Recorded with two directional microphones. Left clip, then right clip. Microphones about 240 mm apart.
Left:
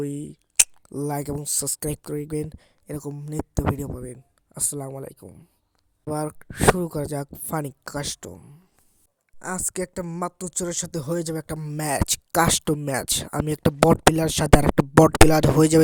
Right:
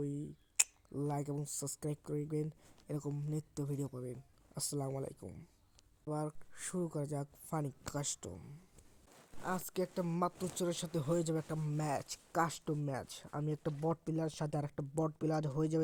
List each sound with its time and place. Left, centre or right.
0.0 s speech: left
6.1 s speech: left